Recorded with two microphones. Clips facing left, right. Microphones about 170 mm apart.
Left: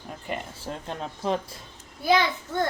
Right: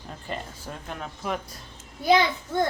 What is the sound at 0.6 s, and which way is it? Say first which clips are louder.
Speech: left 3 dB; 30° left (ahead or behind).